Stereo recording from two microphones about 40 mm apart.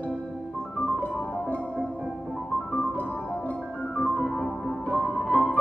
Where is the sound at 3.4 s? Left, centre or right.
Left.